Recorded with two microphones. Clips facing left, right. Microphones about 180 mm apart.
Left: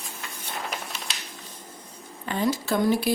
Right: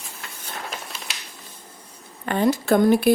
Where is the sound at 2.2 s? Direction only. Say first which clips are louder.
Right 6 dB; 60° right (ahead or behind).